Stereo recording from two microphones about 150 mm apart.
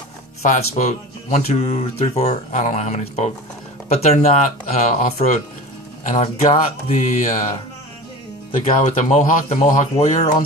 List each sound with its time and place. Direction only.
0.4 s speech: 50° left (ahead or behind)
8.7 s speech: 55° left (ahead or behind)